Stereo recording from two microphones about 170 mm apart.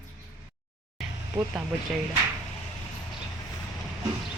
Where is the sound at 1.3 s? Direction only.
20° right (ahead or behind).